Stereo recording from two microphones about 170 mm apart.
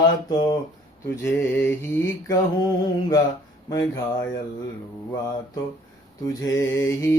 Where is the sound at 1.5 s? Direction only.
15° left (ahead or behind).